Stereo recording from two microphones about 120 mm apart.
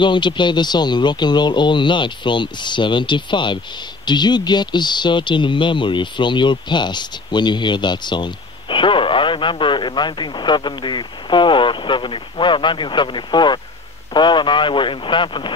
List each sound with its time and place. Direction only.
0.0 s speech: 40° left (ahead or behind)